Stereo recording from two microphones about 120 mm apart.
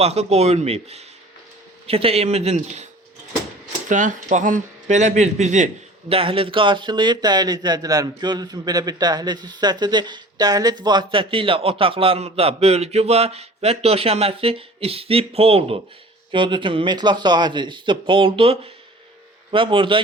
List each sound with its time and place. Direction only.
0.0 s a man's voice: 60° right (ahead or behind)
3.8 s speech: 90° right
6.1 s a man's voice: 50° right (ahead or behind)
16.3 s a man's voice: 40° right (ahead or behind)